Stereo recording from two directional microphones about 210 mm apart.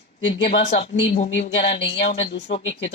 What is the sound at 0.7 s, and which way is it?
Speech, 30° left (ahead or behind).